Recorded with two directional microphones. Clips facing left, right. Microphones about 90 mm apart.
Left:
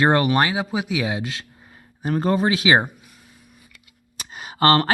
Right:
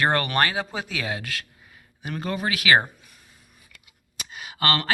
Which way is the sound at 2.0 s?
35° left (ahead or behind).